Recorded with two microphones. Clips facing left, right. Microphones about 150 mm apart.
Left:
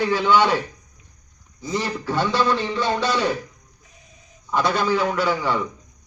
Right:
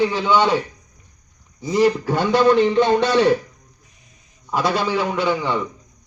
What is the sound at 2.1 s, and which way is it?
A man's voice, 50° right (ahead or behind).